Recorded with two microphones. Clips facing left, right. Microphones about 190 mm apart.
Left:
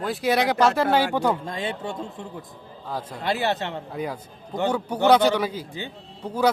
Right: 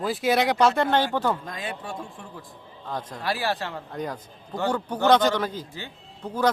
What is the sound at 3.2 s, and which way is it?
Speech, 20° left (ahead or behind).